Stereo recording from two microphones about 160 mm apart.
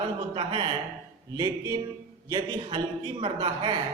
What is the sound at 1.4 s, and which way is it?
Speech, 20° right (ahead or behind).